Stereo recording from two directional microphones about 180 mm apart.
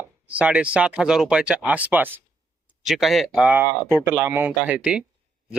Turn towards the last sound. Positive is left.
turn(degrees=-5)  # may be behind; listen again after turning